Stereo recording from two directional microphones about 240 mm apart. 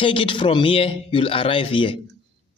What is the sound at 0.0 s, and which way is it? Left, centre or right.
A man's voice, left.